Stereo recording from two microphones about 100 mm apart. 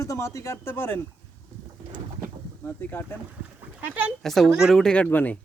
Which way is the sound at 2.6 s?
20° left (ahead or behind).